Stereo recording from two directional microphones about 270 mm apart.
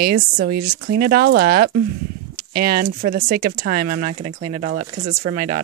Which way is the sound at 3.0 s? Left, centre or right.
Right.